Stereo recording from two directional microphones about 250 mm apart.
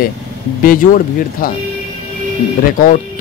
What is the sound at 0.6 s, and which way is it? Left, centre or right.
Speech, left.